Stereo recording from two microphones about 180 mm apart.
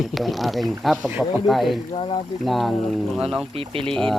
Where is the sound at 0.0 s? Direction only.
Centre (ahead or behind).